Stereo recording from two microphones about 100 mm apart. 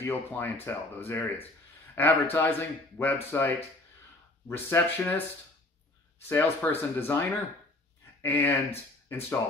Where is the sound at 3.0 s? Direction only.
20° left (ahead or behind).